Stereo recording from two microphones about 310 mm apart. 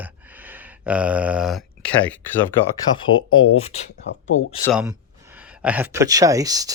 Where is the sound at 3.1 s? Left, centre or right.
Left.